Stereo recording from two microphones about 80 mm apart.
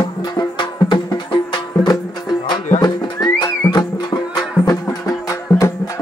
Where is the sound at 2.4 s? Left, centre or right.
Left.